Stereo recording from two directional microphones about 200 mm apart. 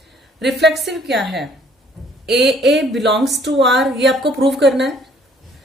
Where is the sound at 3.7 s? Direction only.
Centre (ahead or behind).